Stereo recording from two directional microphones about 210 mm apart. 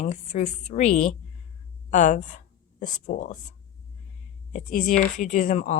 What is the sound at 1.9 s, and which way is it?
Speech, 35° left (ahead or behind).